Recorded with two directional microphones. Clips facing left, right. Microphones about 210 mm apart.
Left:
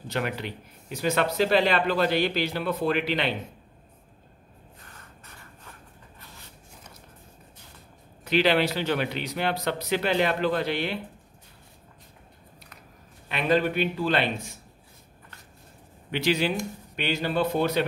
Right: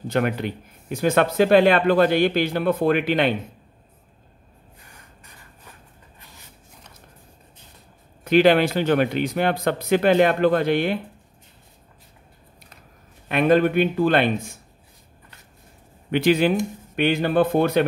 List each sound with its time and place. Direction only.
0.1 s speech: 50° right (ahead or behind)
4.8 s a sound: 10° right (ahead or behind)
8.2 s speech: 50° right (ahead or behind)
13.3 s speech: 50° right (ahead or behind)
16.1 s speech: 50° right (ahead or behind)